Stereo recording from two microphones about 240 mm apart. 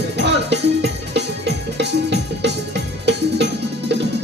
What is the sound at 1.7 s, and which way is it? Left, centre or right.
Music, right.